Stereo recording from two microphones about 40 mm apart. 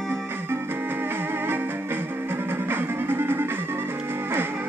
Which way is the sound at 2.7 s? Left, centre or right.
Right.